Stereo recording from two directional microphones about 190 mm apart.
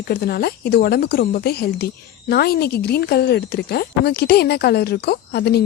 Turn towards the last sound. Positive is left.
turn(degrees=60)  # may be behind; listen again after turning